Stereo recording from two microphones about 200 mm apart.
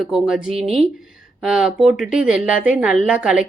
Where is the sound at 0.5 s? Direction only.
30° right (ahead or behind).